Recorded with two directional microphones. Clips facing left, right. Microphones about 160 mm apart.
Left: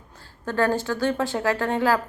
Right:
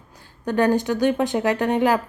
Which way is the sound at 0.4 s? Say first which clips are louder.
Right 4 dB; 15° right (ahead or behind).